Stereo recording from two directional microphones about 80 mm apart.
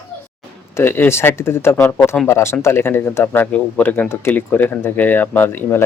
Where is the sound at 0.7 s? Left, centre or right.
Left.